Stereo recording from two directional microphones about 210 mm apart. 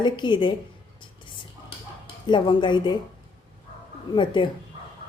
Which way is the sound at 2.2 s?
20° left (ahead or behind).